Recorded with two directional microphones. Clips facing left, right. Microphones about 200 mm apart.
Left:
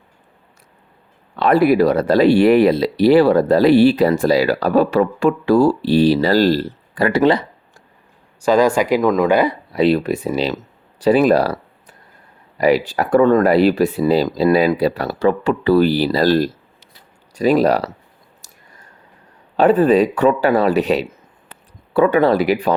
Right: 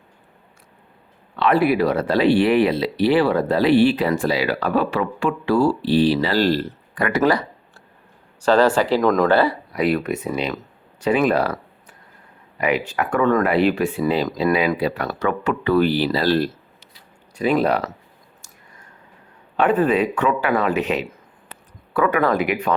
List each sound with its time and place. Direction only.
1.4 s speech: 40° left (ahead or behind)
8.4 s speech: 10° left (ahead or behind)
9.7 s speech: 30° left (ahead or behind)
18.4 s a sound: 40° left (ahead or behind)
19.5 s speech: 35° left (ahead or behind)